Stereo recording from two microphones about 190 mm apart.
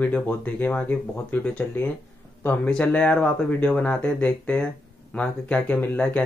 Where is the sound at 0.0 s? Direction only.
10° left (ahead or behind).